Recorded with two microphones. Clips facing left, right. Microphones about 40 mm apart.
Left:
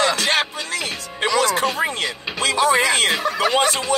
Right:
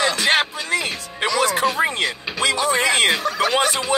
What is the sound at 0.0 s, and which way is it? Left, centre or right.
Music, right.